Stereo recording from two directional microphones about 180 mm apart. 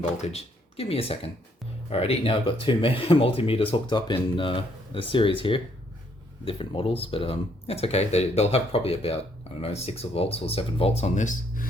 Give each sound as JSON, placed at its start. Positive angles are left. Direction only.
{"t": 0.2, "sound": "speech", "side_deg": 35}